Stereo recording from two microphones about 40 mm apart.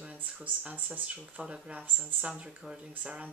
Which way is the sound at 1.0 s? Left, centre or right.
Right.